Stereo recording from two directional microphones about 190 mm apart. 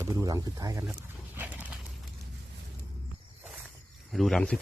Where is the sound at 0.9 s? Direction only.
10° right (ahead or behind).